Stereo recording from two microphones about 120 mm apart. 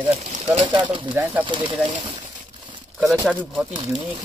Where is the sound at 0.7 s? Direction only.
40° right (ahead or behind).